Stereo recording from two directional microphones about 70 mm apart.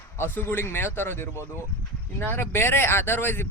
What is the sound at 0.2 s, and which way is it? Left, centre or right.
Speech, left.